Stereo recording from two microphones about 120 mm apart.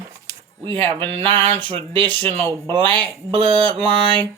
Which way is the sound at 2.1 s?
15° left (ahead or behind).